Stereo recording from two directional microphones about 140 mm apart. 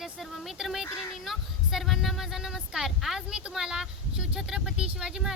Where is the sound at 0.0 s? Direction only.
Centre (ahead or behind).